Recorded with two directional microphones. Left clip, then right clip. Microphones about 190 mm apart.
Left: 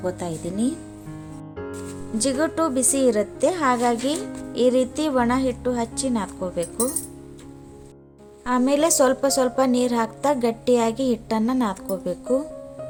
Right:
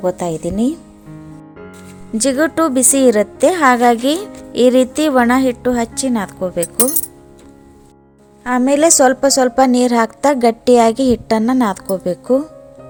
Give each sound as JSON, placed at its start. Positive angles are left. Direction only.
{"t": 0.0, "sound": "a woman's voice", "side_deg": -40}
{"t": 2.1, "sound": "a woman's voice", "side_deg": -40}
{"t": 8.4, "sound": "a woman's voice", "side_deg": -30}